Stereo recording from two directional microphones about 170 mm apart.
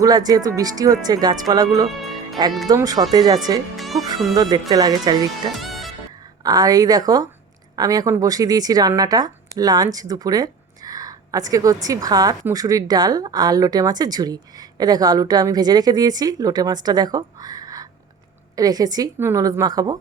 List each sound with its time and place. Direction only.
0.0 s speech: 20° right (ahead or behind)
1.9 s music: centre (ahead or behind)
2.6 s speech: 20° right (ahead or behind)
3.8 s music: centre (ahead or behind)
4.4 s speech: 25° right (ahead or behind)
5.5 s music: centre (ahead or behind)
6.4 s speech: 20° right (ahead or behind)